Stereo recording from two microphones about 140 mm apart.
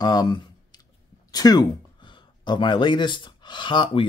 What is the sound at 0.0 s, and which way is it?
Speech, 30° left (ahead or behind).